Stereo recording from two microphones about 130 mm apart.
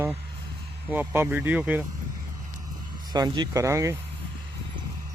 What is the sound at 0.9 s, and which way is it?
Speech, 15° right (ahead or behind).